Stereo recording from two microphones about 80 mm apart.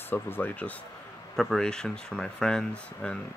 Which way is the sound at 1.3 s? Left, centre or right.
Centre.